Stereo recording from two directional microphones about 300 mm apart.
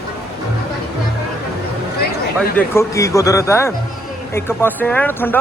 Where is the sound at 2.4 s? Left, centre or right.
Centre.